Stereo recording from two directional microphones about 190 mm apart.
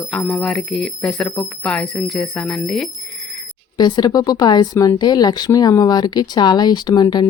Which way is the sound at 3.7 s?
25° left (ahead or behind).